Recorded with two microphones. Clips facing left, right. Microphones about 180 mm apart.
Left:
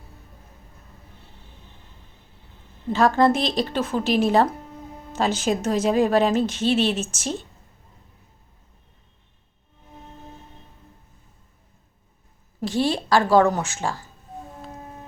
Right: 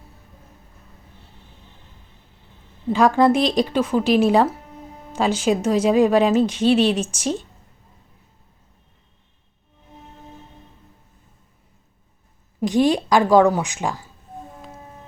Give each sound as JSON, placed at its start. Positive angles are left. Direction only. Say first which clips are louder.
{"t": 2.9, "sound": "speech", "louder": "right 2 dB", "side_deg": -15}
{"t": 12.5, "sound": "a woman's voice", "louder": "right 5 dB", "side_deg": -15}